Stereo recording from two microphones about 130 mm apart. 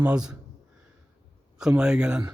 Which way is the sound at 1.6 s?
5° right (ahead or behind).